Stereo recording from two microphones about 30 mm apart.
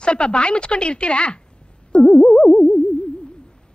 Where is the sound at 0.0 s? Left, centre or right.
Left.